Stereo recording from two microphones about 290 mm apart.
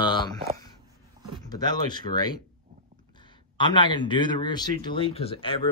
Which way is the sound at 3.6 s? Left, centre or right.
Centre.